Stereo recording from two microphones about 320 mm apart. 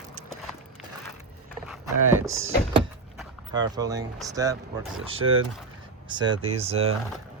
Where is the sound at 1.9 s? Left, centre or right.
Right.